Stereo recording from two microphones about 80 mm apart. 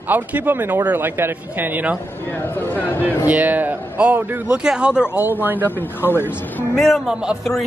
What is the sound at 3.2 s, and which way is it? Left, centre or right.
Speech, centre.